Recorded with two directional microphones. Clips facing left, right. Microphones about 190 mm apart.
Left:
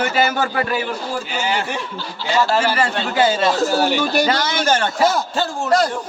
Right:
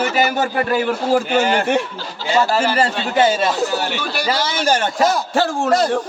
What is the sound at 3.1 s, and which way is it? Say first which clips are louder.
Speech: right 1 dB; 20° right (ahead or behind).